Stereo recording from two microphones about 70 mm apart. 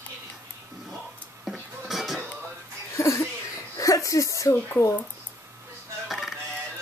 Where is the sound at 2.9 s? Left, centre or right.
Left.